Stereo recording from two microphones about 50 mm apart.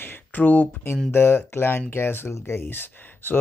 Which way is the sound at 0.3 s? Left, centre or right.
Left.